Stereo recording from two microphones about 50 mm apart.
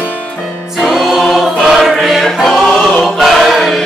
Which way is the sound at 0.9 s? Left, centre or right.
Centre.